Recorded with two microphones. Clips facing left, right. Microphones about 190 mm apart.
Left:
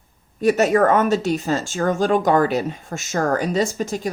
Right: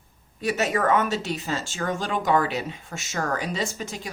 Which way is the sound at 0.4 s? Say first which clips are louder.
Left 8 dB; 45° left (ahead or behind).